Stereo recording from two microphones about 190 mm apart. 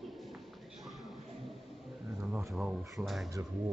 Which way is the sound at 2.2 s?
15° right (ahead or behind).